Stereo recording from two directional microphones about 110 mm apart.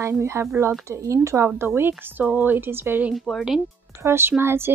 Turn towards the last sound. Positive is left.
turn(degrees=-20)  # may be behind; listen again after turning